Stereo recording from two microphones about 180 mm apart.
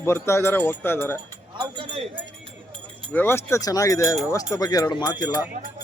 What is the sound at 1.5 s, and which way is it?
Speech, 30° right (ahead or behind).